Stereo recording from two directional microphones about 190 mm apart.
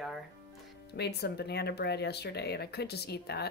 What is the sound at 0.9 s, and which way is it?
Speech, 60° left (ahead or behind).